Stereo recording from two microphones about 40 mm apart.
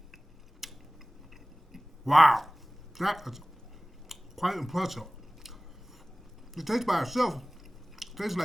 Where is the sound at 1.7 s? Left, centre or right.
Centre.